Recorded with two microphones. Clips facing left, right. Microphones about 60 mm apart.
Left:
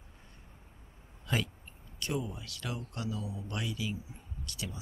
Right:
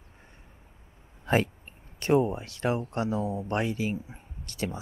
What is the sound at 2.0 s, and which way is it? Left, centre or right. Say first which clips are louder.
Speech: right 12 dB; right.